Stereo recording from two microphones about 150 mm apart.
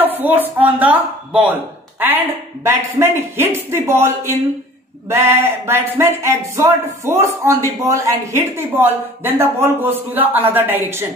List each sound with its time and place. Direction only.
0.0 s a man's voice: 10° right (ahead or behind)